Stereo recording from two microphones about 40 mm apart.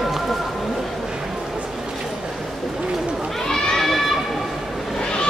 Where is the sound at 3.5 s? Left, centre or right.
Centre.